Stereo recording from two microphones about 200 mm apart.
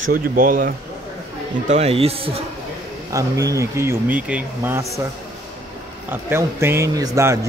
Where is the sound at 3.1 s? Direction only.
15° right (ahead or behind).